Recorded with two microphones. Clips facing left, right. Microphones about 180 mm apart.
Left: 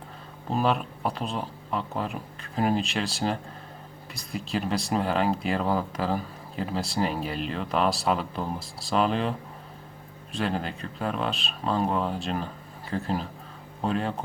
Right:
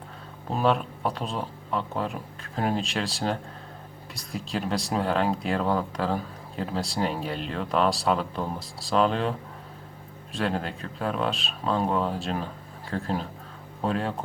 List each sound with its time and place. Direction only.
0.5 s speech: centre (ahead or behind)
10.3 s speech: centre (ahead or behind)